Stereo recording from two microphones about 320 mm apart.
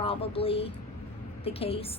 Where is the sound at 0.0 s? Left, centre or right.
Centre.